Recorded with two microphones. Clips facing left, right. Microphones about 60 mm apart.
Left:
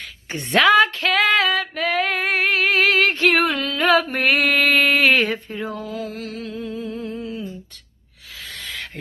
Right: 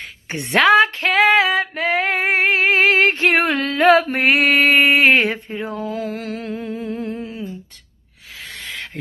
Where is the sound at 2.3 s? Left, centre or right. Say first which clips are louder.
Right 2 dB; right.